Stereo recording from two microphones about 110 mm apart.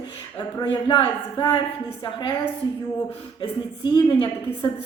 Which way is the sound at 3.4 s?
45° left (ahead or behind).